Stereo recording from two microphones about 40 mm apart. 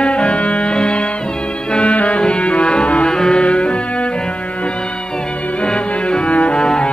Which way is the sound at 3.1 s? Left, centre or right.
Centre.